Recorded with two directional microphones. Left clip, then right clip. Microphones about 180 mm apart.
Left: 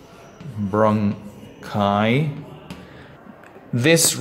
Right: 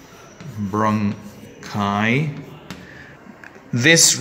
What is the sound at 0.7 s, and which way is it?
A man's voice, 10° left (ahead or behind).